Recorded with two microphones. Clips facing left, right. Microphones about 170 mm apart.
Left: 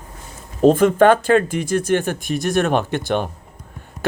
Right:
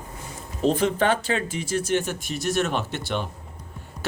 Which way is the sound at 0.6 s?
50° left (ahead or behind).